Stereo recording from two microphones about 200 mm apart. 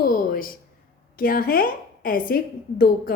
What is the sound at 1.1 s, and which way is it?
A woman's voice, 45° left (ahead or behind).